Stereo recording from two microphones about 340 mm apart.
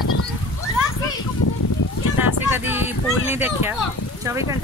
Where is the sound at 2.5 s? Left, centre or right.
Centre.